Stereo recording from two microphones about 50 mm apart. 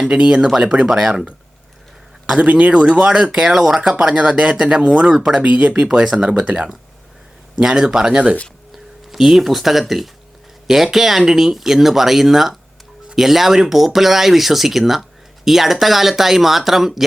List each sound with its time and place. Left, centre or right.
0.1 s speech: centre
2.4 s speech: right
7.6 s speech: centre
9.1 s speech: centre